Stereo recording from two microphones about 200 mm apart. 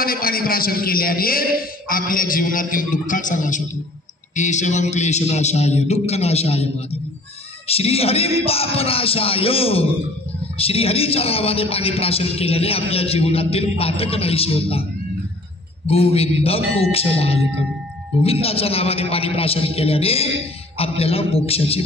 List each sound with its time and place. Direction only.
0.0 s a man's voice: 45° left (ahead or behind); by 14.9 s 30° left (ahead or behind)
15.9 s a man's voice: 30° left (ahead or behind)